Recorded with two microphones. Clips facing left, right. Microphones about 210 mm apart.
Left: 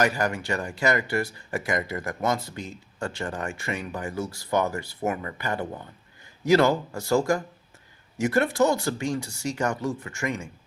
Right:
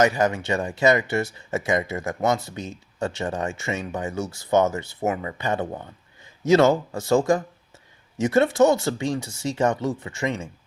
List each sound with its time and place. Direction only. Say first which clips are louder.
0.0 s speech: right 4 dB; 20° right (ahead or behind)